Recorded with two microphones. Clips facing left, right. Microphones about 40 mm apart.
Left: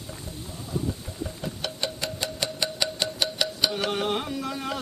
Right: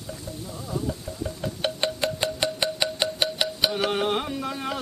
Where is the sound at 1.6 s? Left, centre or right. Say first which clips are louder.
Right 6 dB; right; by 4.7 s centre.